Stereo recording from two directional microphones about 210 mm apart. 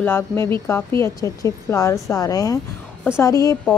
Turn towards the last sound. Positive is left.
turn(degrees=15)  # may be behind; listen again after turning